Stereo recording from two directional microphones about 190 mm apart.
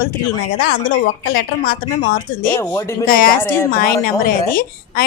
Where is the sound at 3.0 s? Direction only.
50° left (ahead or behind).